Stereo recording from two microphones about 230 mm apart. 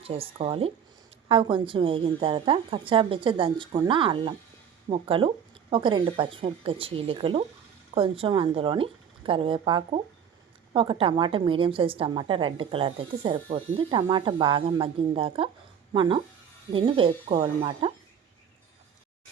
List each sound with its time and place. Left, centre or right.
0.0 s a woman's voice: right